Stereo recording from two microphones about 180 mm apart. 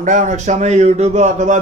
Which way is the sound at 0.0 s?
45° right (ahead or behind).